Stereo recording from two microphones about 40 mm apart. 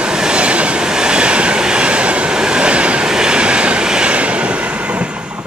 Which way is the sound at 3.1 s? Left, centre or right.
Right.